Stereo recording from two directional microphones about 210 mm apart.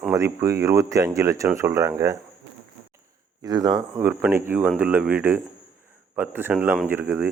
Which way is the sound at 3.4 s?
20° right (ahead or behind).